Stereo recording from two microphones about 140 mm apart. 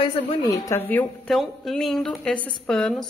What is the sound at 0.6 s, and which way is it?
Speech, 15° left (ahead or behind).